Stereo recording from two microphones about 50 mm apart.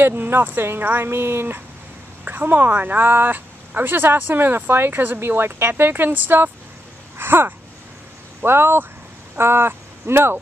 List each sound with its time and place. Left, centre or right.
0.0 s a woman's voice: right
2.2 s a woman's voice: right